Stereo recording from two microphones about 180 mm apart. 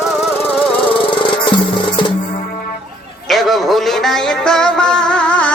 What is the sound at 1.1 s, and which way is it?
Music, 30° left (ahead or behind).